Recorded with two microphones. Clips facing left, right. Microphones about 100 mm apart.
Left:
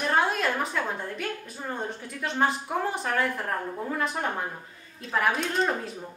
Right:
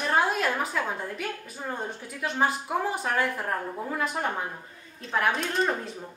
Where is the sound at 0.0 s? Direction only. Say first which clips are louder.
Even; centre (ahead or behind).